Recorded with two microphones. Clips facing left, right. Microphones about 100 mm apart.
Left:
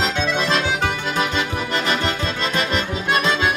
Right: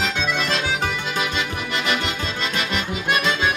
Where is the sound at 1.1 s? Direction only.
40° left (ahead or behind).